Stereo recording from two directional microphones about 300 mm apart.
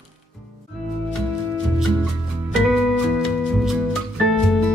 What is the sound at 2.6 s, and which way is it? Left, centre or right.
Music, centre.